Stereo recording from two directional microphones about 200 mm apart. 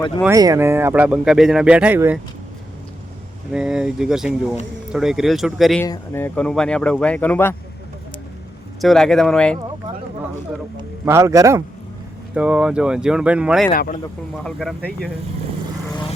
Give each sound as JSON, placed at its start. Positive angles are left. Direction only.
{"t": 0.3, "sound": "speech", "side_deg": -15}
{"t": 3.5, "sound": "speech", "side_deg": -5}
{"t": 5.8, "sound": "speech", "side_deg": 10}
{"t": 8.8, "sound": "speech", "side_deg": 0}
{"t": 11.0, "sound": "speech", "side_deg": -15}
{"t": 12.3, "sound": "speech", "side_deg": -5}
{"t": 13.7, "sound": "speech", "side_deg": 45}
{"t": 14.4, "sound": "speech", "side_deg": 0}